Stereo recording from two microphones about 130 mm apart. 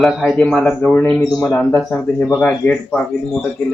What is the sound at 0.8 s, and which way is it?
Speech, 15° left (ahead or behind).